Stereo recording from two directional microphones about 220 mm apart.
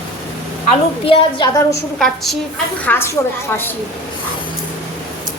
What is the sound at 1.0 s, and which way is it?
Speech, 20° left (ahead or behind).